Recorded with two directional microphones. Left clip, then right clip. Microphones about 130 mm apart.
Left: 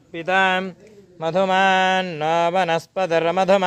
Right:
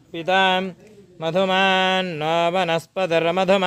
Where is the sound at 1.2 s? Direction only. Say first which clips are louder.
Left 1 dB; 15° right (ahead or behind).